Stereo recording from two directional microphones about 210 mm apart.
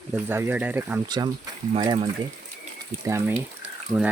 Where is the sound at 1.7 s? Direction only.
25° right (ahead or behind).